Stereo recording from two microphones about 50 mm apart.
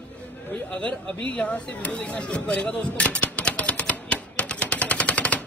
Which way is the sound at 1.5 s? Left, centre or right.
Left.